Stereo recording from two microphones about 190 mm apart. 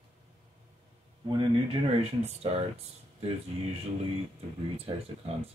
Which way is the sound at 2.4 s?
35° right (ahead or behind).